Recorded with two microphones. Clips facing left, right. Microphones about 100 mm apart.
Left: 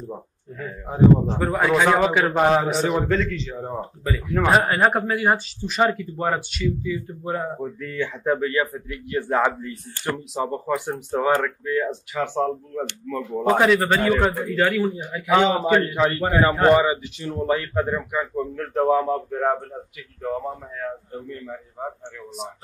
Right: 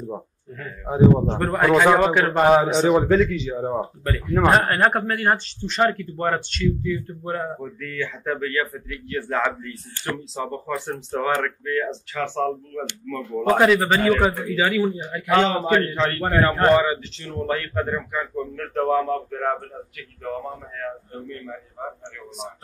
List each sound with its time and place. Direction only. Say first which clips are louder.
0.6 s a man's voice: right 1 dB; centre (ahead or behind)
3.7 s speech: right 2 dB; centre (ahead or behind)
13.2 s speech: right 1 dB; centre (ahead or behind)
14.9 s speech: left 1 dB; 10° left (ahead or behind)
20.2 s speech: left 3 dB; 5° left (ahead or behind)